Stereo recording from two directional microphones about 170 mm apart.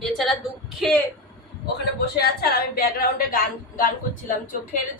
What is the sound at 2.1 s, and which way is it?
A woman's voice, 65° left (ahead or behind).